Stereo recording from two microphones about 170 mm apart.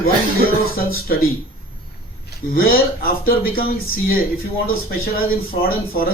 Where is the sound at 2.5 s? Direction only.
60° left (ahead or behind).